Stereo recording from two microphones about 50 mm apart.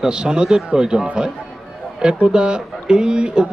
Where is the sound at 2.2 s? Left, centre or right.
Centre.